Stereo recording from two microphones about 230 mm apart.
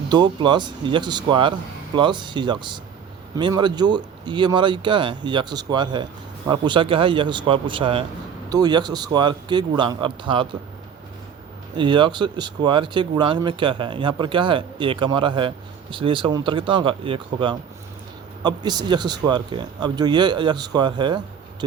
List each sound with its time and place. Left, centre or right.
0.1 s speech: centre
11.8 s speech: right